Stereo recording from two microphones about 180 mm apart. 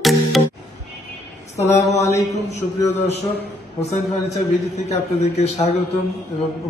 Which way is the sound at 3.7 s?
35° left (ahead or behind).